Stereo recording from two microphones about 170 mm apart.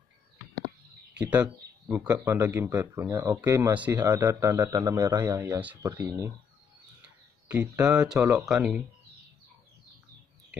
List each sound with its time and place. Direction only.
1.1 s speech: 10° right (ahead or behind)
7.7 s speech: 20° right (ahead or behind)
8.1 s speech: 5° right (ahead or behind)